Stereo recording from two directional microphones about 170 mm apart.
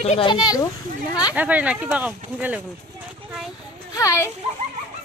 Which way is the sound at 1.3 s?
10° right (ahead or behind).